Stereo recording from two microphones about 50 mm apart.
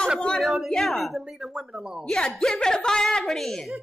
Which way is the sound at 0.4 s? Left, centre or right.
Centre.